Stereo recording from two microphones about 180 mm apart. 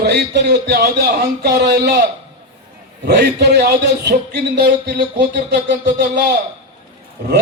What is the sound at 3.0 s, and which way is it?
A man's voice, 65° right (ahead or behind).